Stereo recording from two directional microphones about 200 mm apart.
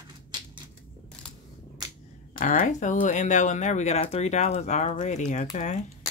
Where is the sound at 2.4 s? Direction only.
40° left (ahead or behind).